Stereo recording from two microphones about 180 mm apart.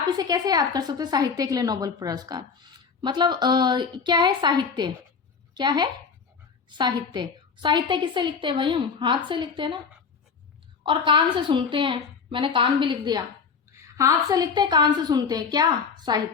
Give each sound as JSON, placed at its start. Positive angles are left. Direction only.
{"t": 0.1, "sound": "a woman's voice", "side_deg": -20}
{"t": 10.8, "sound": "a woman's voice", "side_deg": -25}